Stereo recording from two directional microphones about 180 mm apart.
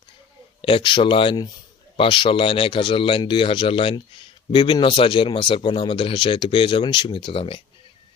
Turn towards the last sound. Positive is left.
turn(degrees=30)  # may be behind; listen again after turning